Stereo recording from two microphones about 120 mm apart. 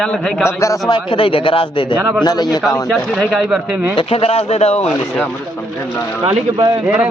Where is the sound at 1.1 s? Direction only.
45° left (ahead or behind); by 2.9 s 30° left (ahead or behind).